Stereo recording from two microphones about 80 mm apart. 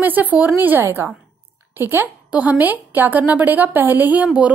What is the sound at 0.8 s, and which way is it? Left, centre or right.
A woman's voice, right.